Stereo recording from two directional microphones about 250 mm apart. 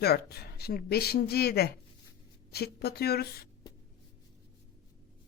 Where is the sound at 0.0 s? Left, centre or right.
Left.